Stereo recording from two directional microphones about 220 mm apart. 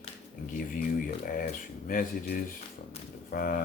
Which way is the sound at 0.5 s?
40° left (ahead or behind).